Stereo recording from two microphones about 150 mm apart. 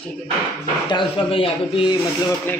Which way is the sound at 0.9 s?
35° left (ahead or behind).